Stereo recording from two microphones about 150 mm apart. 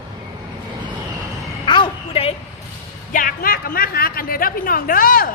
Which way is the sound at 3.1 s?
70° left (ahead or behind).